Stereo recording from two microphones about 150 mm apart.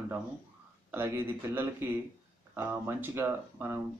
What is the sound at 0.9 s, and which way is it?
Speech, 15° right (ahead or behind).